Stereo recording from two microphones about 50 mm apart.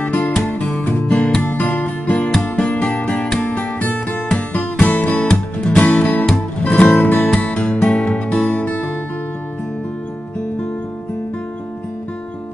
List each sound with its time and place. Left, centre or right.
0.0 s music: left
6.7 s music: centre
7.0 s music: left